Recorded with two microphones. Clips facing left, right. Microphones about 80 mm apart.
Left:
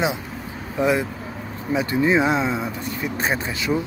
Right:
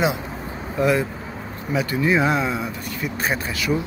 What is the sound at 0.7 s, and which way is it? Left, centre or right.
Speech, centre.